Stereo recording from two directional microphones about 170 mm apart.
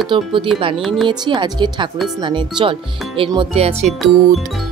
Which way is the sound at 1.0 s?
25° right (ahead or behind).